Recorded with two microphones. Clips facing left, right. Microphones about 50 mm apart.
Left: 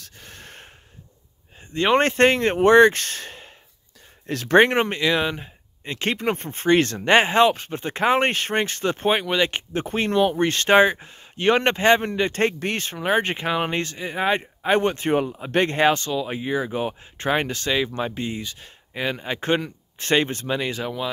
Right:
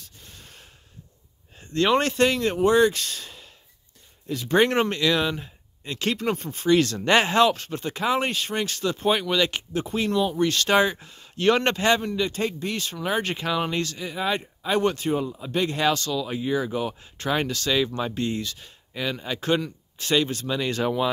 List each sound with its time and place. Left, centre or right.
0.0 s snort: left
1.6 s a sound: left
2.0 s speech: left
4.3 s speech: left
4.6 s speech: left
7.0 s speech: left
9.2 s speech: left
12.0 s speech: left
12.7 s speech: left
15.0 s speech: left
20.7 s speech: centre